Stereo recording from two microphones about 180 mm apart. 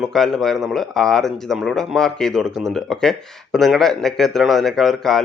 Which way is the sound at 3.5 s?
Centre (ahead or behind).